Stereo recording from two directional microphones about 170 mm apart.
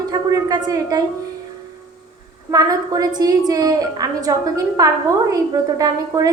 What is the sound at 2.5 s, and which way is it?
A woman's voice, 20° right (ahead or behind).